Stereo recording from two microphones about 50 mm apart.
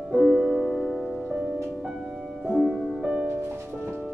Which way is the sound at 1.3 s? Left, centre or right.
Centre.